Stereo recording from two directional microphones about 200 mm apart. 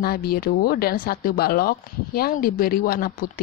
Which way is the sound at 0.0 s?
50° left (ahead or behind).